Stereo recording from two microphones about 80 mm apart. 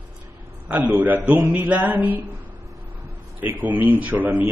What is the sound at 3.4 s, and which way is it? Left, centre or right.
A man's voice, right.